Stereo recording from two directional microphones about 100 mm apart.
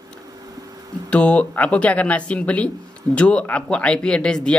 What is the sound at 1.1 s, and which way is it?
Speech, 10° left (ahead or behind).